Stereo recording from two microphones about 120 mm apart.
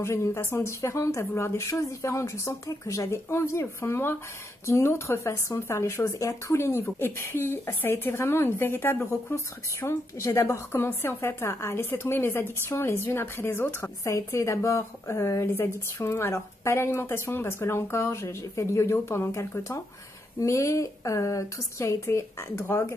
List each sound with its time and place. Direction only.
0.0 s speech: 20° left (ahead or behind)